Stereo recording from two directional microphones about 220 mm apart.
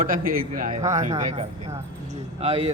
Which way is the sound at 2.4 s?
25° right (ahead or behind).